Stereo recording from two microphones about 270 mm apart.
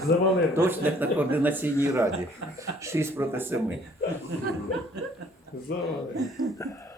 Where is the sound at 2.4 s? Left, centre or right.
Right.